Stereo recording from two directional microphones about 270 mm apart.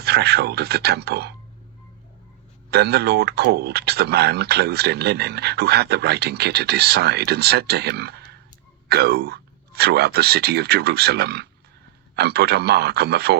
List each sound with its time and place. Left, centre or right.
0.0 s speech: right
2.6 s speech: right